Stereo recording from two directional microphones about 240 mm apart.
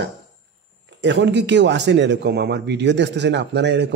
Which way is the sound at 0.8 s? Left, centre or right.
Right.